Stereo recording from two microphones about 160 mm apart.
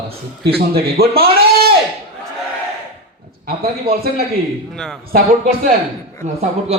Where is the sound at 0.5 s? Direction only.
70° right (ahead or behind).